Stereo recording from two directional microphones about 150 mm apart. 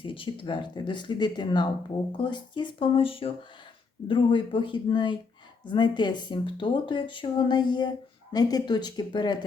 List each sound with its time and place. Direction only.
0.0 s speech: 35° left (ahead or behind)